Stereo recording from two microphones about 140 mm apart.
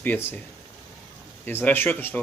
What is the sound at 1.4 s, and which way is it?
Speech, 15° left (ahead or behind).